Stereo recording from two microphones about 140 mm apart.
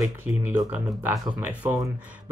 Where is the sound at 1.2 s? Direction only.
25° right (ahead or behind).